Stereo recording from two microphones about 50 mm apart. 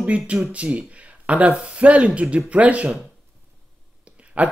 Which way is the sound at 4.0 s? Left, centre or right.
Right.